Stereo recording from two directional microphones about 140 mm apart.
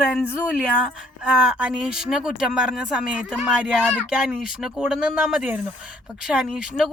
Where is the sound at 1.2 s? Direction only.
10° right (ahead or behind).